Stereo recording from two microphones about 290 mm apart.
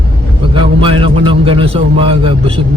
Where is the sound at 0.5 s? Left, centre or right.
Centre.